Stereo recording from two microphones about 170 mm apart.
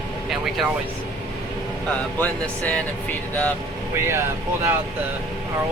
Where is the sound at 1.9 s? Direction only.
10° left (ahead or behind).